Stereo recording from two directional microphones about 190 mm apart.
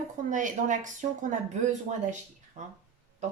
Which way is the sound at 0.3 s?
40° right (ahead or behind).